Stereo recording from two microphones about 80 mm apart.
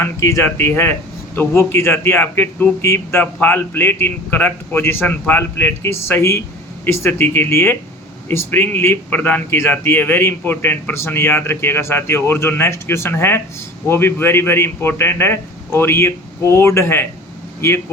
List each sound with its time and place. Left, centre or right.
0.0 s a man's voice: left